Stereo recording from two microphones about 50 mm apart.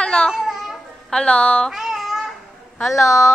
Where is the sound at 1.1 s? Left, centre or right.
Centre.